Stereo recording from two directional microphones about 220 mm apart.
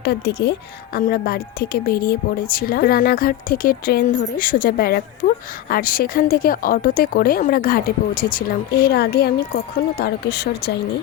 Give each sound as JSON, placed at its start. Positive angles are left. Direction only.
{"t": 0.0, "sound": "speech", "side_deg": 50}